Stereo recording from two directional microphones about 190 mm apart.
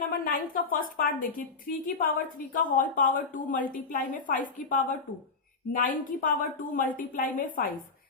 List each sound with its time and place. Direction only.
0.1 s a woman's voice: 50° left (ahead or behind)